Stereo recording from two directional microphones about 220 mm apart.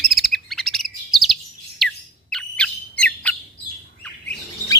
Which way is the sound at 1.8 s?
Centre (ahead or behind).